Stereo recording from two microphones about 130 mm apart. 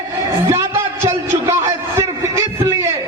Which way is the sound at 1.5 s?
20° right (ahead or behind).